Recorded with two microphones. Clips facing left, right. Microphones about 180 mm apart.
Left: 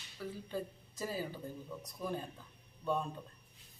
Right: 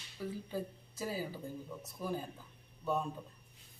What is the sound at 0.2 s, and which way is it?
Speech, 10° right (ahead or behind).